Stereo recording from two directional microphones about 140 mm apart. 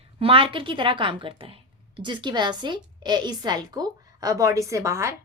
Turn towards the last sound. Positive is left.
turn(degrees=-20)  # may be behind; listen again after turning